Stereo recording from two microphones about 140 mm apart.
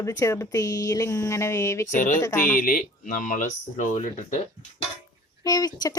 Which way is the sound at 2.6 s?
90° left.